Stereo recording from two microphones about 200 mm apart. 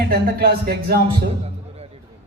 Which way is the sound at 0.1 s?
50° right (ahead or behind).